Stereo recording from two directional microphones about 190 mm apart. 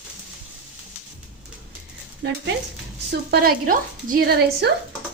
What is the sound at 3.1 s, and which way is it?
Speech, 55° right (ahead or behind).